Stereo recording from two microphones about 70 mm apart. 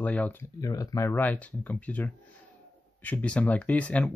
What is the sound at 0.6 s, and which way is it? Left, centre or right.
Speech, left.